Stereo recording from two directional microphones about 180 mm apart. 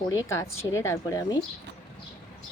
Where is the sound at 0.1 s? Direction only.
15° left (ahead or behind).